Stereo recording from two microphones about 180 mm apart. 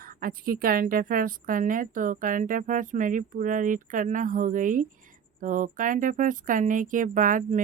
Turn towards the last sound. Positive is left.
turn(degrees=-45)  # may be behind; listen again after turning